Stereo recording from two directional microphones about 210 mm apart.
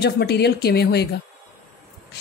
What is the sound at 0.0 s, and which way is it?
A woman's voice, 55° left (ahead or behind).